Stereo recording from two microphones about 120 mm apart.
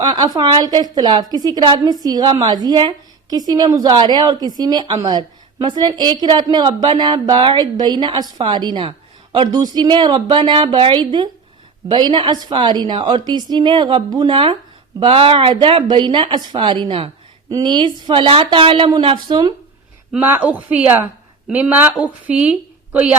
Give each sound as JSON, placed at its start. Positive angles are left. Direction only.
{"t": 0.0, "sound": "a woman's voice", "side_deg": -35}
{"t": 20.1, "sound": "speech", "side_deg": -15}